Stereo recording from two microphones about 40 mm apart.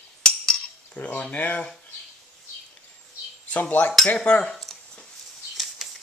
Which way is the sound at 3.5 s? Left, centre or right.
Left.